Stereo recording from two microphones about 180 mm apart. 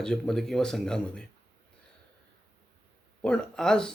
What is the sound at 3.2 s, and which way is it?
Speech, 5° left (ahead or behind).